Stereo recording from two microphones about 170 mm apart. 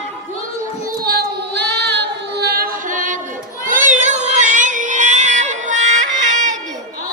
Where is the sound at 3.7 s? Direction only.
50° right (ahead or behind).